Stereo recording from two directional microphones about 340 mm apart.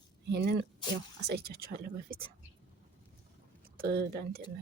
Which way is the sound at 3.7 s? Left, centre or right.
Right.